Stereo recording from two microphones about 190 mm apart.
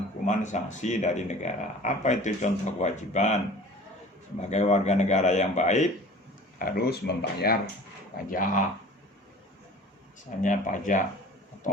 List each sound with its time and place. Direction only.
0.3 s speech: 40° left (ahead or behind)
6.6 s speech: 50° left (ahead or behind)
10.4 s speech: 45° left (ahead or behind)